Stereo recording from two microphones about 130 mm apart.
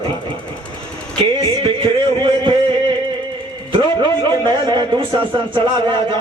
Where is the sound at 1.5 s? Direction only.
40° right (ahead or behind).